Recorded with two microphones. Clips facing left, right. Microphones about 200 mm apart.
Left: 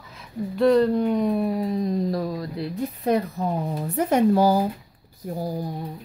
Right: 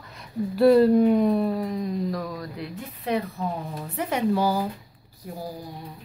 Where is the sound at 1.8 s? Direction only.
35° left (ahead or behind).